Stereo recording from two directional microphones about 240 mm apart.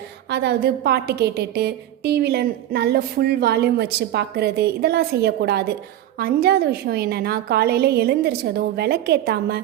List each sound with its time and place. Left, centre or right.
0.3 s a woman's voice: right